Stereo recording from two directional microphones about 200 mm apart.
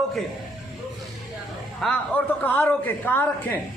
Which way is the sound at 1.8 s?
5° left (ahead or behind).